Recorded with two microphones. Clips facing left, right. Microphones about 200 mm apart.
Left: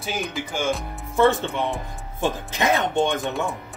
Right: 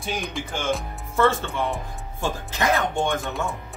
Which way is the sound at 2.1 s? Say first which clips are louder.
Left 3 dB; 20° left (ahead or behind).